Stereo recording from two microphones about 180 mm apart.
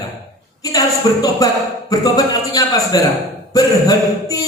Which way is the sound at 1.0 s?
20° left (ahead or behind).